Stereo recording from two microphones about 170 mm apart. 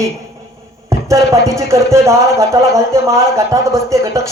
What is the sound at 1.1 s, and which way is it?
A man's voice, 15° right (ahead or behind).